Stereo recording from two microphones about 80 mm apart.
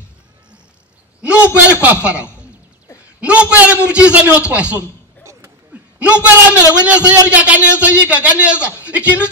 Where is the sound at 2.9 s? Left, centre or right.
Centre.